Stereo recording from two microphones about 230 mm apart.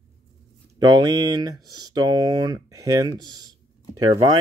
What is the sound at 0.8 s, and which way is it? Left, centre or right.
Speech, centre.